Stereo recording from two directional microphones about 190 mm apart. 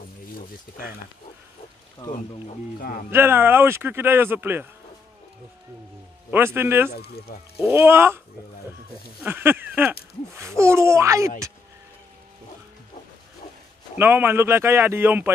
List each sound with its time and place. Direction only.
0.4 s speech: 50° left (ahead or behind)
2.8 s speech: 50° left (ahead or behind)
3.1 s speech: 10° right (ahead or behind)
6.3 s speech: 10° right (ahead or behind)
6.9 s speech: 55° left (ahead or behind)
7.6 s speech: 15° right (ahead or behind)
9.2 s speech: 10° right (ahead or behind)
13.9 s speech: 10° right (ahead or behind)